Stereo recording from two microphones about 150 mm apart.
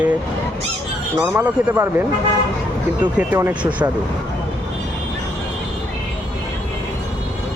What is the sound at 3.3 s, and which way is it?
Speech, 10° right (ahead or behind).